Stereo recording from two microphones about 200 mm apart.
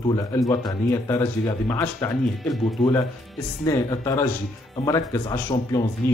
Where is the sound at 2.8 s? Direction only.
Centre (ahead or behind).